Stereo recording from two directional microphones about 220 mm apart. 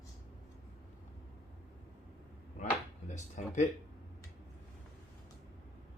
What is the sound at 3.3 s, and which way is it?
Speech, 35° left (ahead or behind).